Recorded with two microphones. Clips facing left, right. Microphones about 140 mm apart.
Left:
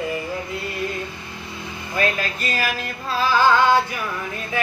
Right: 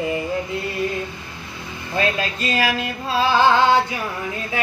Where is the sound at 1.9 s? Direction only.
25° right (ahead or behind).